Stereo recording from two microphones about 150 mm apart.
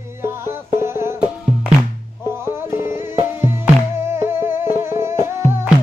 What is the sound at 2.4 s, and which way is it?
Music, 15° right (ahead or behind).